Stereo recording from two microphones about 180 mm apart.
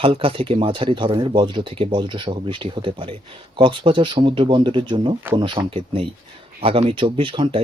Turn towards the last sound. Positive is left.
turn(degrees=-30)  # may be behind; listen again after turning